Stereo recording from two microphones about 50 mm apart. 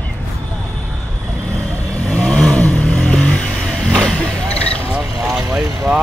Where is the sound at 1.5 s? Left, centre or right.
Left.